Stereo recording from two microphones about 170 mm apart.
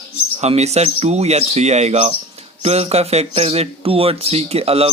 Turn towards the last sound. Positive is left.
turn(degrees=-35)  # may be behind; listen again after turning